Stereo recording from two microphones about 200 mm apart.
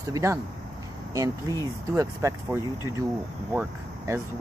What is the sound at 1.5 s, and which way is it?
Speech, 15° right (ahead or behind).